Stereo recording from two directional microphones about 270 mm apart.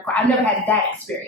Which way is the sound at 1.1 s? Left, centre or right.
Centre.